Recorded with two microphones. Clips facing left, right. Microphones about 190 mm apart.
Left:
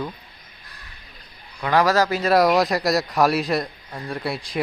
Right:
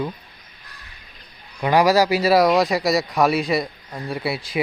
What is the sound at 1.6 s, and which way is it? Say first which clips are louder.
Speech: right 3 dB; 15° right (ahead or behind).